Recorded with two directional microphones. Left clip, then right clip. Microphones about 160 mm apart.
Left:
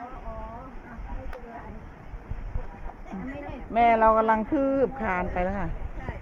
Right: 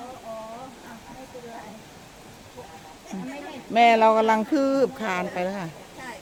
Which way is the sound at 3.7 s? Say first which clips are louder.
Right 3 dB; 70° right (ahead or behind).